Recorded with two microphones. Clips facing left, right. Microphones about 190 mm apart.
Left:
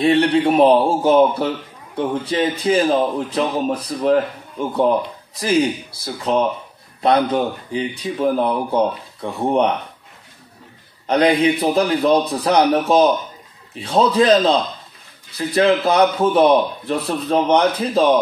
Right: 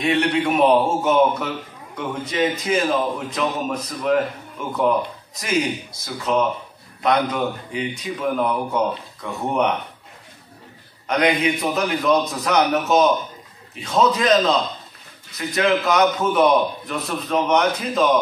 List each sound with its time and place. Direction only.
0.0 s a man's voice: 35° left (ahead or behind)
11.1 s a man's voice: 30° left (ahead or behind)